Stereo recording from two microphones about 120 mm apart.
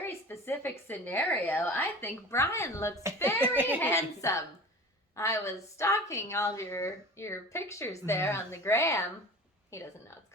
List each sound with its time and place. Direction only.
0.0 s a woman's voice: 20° left (ahead or behind)
3.4 s a child's voice: 15° right (ahead or behind)
3.8 s a woman's voice: 20° left (ahead or behind)